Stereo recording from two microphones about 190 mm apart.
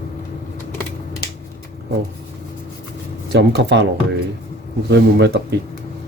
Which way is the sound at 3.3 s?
65° right (ahead or behind).